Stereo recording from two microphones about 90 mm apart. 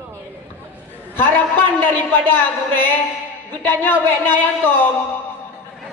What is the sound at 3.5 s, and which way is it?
Speech, 20° left (ahead or behind).